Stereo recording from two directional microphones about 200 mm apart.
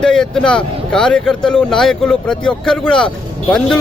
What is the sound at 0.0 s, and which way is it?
Speech, 5° left (ahead or behind).